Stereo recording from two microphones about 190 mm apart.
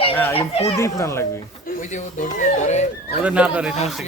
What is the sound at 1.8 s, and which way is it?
Speech, 40° left (ahead or behind).